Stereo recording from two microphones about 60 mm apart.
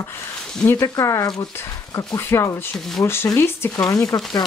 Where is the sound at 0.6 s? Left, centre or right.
Left.